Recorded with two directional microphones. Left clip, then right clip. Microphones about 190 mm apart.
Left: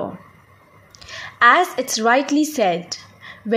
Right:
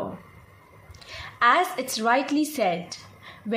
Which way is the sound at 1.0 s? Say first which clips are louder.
Left 7 dB; 30° left (ahead or behind).